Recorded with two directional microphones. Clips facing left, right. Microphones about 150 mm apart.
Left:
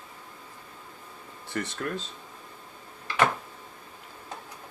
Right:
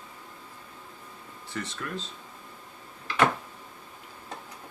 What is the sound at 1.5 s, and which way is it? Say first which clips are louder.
Speech: left 3 dB; 50° left (ahead or behind).